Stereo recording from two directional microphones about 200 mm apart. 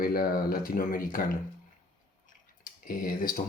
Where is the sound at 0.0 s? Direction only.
45° left (ahead or behind).